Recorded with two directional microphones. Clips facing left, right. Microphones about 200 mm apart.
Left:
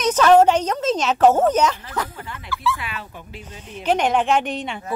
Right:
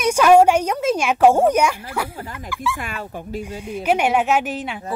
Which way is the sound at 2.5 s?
15° right (ahead or behind).